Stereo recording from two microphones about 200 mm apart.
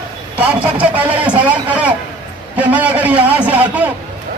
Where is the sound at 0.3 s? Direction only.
5° right (ahead or behind).